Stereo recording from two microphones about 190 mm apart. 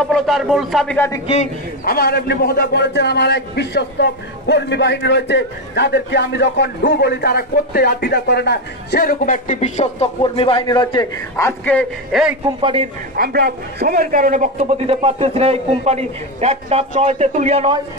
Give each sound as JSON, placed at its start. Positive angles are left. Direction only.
{"t": 0.0, "sound": "speech", "side_deg": 0}
{"t": 1.2, "sound": "a man's voice", "side_deg": 35}
{"t": 1.9, "sound": "a man's voice", "side_deg": 50}
{"t": 12.4, "sound": "a man's voice", "side_deg": -30}
{"t": 13.1, "sound": "a man's voice", "side_deg": -55}